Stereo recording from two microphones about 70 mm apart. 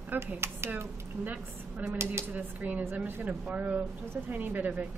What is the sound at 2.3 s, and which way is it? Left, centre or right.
A woman's voice, right.